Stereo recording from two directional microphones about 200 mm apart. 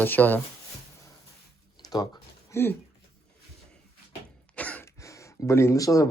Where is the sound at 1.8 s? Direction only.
20° left (ahead or behind).